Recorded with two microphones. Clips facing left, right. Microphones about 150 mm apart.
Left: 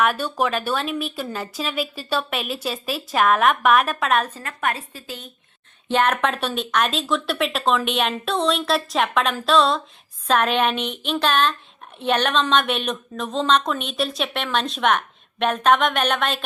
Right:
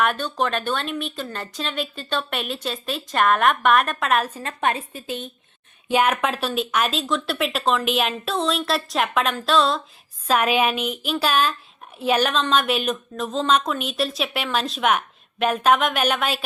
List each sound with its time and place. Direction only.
0.0 s a woman's voice: 5° left (ahead or behind)
4.4 s a woman's voice: 20° right (ahead or behind)
5.9 s a woman's voice: 10° right (ahead or behind)